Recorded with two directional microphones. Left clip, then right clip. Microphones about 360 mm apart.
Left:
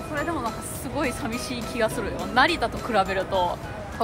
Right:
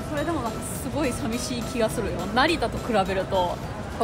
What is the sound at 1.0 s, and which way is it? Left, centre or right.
A woman's voice, centre.